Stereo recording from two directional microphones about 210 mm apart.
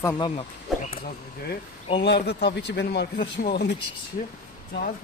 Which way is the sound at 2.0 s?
55° left (ahead or behind).